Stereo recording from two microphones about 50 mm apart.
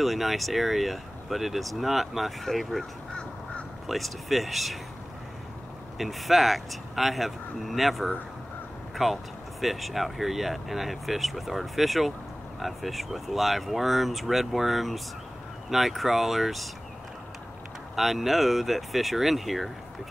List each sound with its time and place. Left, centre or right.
0.0 s speech: centre
5.9 s speech: centre
17.9 s speech: centre